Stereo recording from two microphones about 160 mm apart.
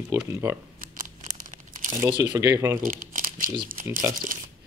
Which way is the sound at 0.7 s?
55° right (ahead or behind).